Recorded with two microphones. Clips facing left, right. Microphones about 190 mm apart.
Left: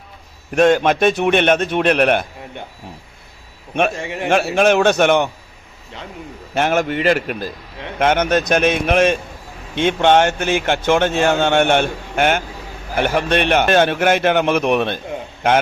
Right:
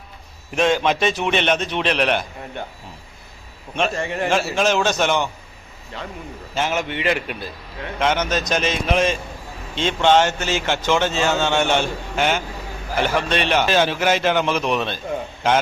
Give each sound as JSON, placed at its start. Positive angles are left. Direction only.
{"t": 0.5, "sound": "a man's voice", "side_deg": 50}
{"t": 3.9, "sound": "a man's voice", "side_deg": 15}
{"t": 4.3, "sound": "speech", "side_deg": 60}
{"t": 6.5, "sound": "a man's voice", "side_deg": 60}
{"t": 7.9, "sound": "speech", "side_deg": 55}